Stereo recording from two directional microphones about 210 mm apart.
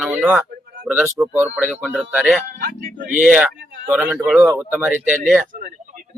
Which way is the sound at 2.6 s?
45° right (ahead or behind).